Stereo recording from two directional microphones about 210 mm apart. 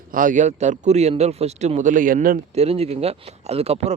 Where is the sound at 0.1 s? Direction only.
40° right (ahead or behind).